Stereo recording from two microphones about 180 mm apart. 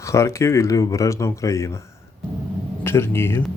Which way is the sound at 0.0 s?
15° left (ahead or behind).